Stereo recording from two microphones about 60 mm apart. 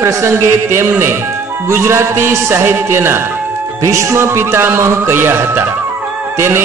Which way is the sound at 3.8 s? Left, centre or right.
Right.